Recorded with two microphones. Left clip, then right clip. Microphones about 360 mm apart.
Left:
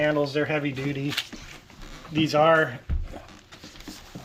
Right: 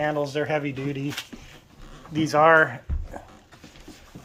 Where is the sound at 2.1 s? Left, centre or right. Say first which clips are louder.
Right 2 dB; centre.